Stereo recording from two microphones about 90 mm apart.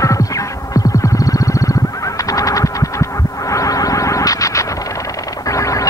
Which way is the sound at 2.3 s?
40° left (ahead or behind).